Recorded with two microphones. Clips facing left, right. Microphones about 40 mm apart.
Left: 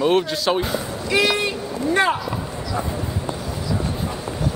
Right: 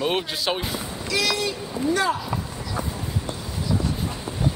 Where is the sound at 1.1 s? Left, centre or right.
Left.